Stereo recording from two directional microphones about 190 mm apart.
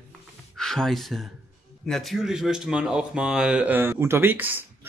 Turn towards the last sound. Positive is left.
turn(degrees=-10)  # may be behind; listen again after turning